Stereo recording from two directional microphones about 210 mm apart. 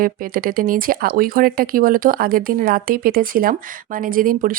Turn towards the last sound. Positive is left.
turn(degrees=-40)  # may be behind; listen again after turning